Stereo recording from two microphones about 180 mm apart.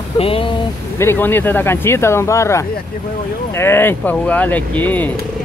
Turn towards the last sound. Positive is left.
turn(degrees=10)  # may be behind; listen again after turning